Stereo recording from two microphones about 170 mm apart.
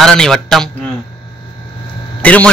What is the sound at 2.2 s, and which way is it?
Speech, 10° left (ahead or behind).